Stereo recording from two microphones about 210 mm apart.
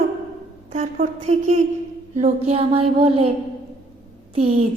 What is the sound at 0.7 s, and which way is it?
Speech, 35° right (ahead or behind).